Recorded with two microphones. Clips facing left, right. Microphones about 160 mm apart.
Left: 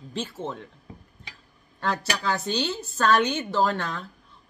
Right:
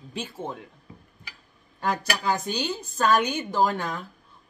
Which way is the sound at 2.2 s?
10° right (ahead or behind).